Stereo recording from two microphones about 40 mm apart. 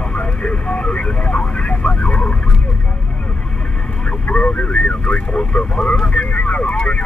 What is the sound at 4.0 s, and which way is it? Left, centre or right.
Vehicle, left.